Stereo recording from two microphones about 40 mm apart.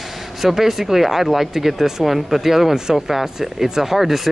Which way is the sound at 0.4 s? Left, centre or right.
Centre.